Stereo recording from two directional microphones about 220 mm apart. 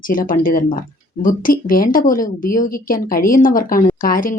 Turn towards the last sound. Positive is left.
turn(degrees=40)  # may be behind; listen again after turning